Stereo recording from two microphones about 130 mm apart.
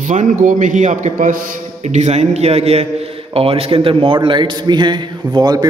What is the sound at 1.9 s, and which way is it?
A man's voice, 60° right (ahead or behind).